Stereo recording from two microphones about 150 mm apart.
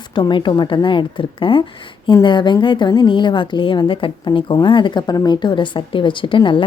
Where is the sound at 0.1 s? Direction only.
30° left (ahead or behind).